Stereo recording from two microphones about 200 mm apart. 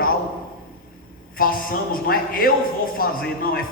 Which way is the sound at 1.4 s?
45° left (ahead or behind).